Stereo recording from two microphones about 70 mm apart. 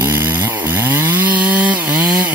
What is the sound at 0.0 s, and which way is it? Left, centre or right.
Chainsaw, right.